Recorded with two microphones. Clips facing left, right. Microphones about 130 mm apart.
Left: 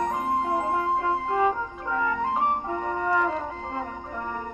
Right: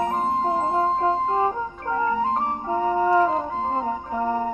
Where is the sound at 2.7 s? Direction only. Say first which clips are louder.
Right 6 dB; 30° right (ahead or behind).